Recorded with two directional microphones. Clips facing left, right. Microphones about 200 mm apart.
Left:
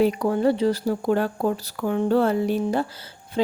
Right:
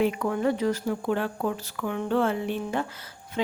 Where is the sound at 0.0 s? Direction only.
35° left (ahead or behind).